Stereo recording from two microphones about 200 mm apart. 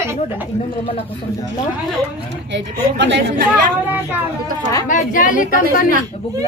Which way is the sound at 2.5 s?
60° right (ahead or behind).